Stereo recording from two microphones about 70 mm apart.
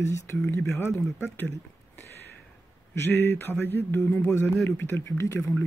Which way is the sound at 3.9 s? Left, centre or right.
Left.